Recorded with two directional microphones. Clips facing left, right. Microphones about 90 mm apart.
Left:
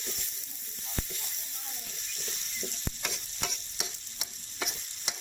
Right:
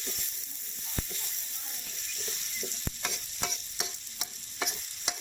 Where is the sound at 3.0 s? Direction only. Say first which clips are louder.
Right 2 dB; 25° right (ahead or behind).